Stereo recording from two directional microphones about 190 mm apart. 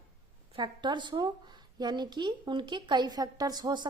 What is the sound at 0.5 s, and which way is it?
Speech, 25° right (ahead or behind).